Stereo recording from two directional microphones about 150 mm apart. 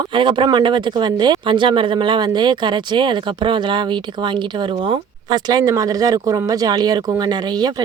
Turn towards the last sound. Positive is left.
turn(degrees=-25)  # may be behind; listen again after turning